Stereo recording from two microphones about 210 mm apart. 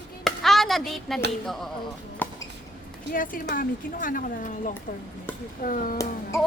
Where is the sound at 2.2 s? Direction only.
10° left (ahead or behind).